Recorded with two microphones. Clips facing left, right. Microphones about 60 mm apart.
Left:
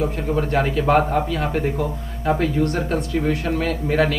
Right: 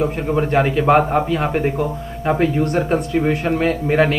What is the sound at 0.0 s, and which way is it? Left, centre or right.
Speech, right.